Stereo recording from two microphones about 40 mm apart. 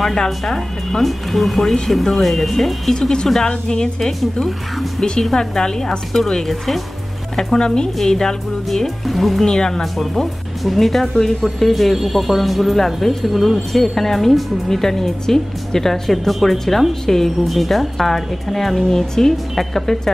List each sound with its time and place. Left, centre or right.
0.0 s speech: centre
1.0 s speech: centre
2.9 s speech: centre
4.2 s speech: centre
5.3 s speech: centre
7.5 s a woman's voice: left
8.8 s speech: centre
9.4 s speech: centre
9.9 s speech: centre